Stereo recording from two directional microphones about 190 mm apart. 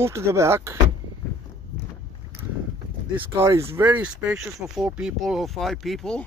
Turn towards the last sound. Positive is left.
turn(degrees=5)  # may be behind; listen again after turning